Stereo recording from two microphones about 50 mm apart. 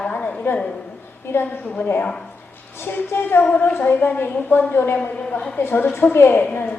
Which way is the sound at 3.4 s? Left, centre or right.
Left.